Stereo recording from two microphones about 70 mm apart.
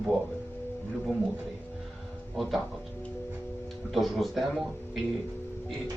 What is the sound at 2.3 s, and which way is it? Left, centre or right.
Speech, centre.